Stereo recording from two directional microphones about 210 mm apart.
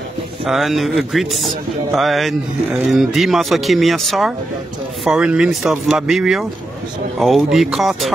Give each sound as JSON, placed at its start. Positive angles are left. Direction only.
{"t": 0.5, "sound": "speech", "side_deg": 0}